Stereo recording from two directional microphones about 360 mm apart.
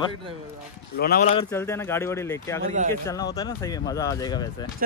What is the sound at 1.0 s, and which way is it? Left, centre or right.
Speech, left.